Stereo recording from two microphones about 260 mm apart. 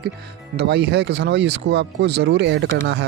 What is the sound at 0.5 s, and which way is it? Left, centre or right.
Speech, right.